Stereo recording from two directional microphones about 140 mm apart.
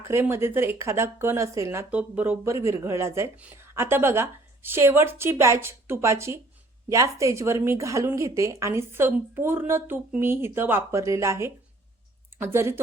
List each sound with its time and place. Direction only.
0.1 s a woman's voice: 20° right (ahead or behind)